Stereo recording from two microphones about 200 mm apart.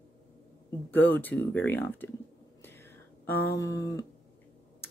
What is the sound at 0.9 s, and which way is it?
Speech, 10° left (ahead or behind).